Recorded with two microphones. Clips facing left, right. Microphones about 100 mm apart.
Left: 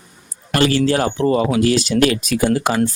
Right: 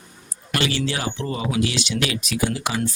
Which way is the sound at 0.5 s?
45° left (ahead or behind).